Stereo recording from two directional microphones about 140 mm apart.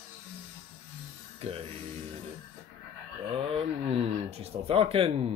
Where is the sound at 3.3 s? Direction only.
40° right (ahead or behind).